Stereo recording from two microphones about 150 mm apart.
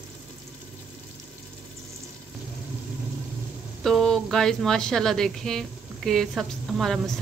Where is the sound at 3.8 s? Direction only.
5° left (ahead or behind).